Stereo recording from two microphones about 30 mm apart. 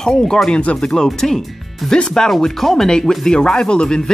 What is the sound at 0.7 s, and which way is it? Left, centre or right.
Speech, left.